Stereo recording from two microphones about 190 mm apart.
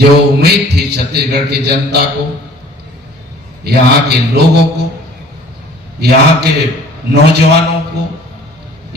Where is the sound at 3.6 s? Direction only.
55° right (ahead or behind).